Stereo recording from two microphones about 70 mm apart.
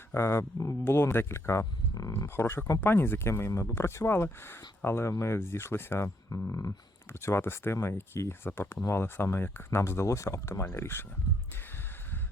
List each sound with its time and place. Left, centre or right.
0.1 s speech: left
6.5 s speech: left